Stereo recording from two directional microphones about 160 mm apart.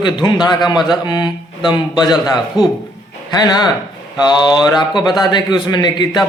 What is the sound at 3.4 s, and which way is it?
A man's voice, 25° left (ahead or behind).